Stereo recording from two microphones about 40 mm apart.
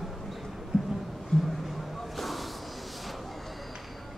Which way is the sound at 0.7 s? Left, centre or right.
Centre.